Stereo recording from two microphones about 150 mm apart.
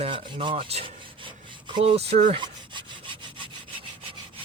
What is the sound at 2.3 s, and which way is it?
Rub, 30° right (ahead or behind).